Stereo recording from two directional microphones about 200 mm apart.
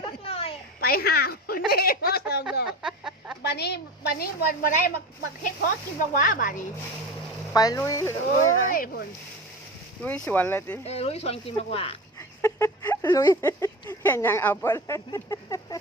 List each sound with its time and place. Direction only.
0.3 s a sound: 30° left (ahead or behind)
0.8 s speech: 50° left (ahead or behind)
2.8 s chicken: 5° right (ahead or behind)
3.4 s speech: 55° left (ahead or behind)
7.5 s speech: 20° left (ahead or behind)
8.7 s speech: 45° left (ahead or behind)
10.0 s speech: 5° left (ahead or behind)
10.8 s speech: 30° left (ahead or behind)
12.4 s a sound: 15° left (ahead or behind)
13.1 s speech: 15° left (ahead or behind)